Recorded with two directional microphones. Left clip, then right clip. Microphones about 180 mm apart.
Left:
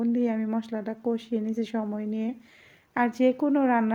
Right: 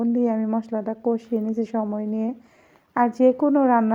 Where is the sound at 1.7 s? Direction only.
15° left (ahead or behind).